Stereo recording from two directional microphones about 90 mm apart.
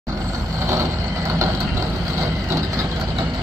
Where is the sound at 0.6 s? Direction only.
35° right (ahead or behind).